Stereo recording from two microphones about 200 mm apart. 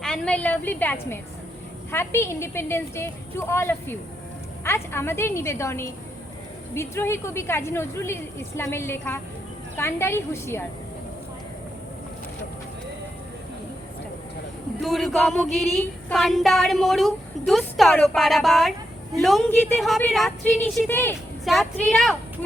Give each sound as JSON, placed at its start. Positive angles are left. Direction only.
{"t": 0.0, "sound": "speech", "side_deg": 5}
{"t": 14.8, "sound": "speech", "side_deg": 0}
{"t": 20.9, "sound": "speech", "side_deg": 10}
{"t": 21.4, "sound": "speech", "side_deg": 0}